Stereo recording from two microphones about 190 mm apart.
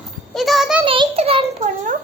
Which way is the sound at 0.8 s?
25° right (ahead or behind).